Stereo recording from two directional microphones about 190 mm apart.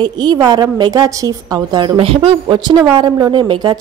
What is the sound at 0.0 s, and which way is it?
Speech, 20° right (ahead or behind).